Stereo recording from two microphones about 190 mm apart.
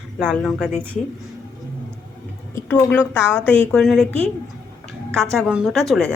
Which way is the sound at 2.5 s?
15° left (ahead or behind).